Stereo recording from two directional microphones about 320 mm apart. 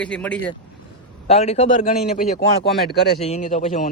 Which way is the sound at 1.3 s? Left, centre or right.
Centre.